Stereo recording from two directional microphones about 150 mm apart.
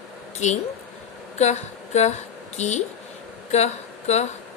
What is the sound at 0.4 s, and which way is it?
A woman's voice, 50° left (ahead or behind).